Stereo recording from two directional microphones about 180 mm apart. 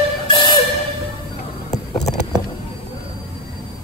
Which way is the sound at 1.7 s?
40° left (ahead or behind).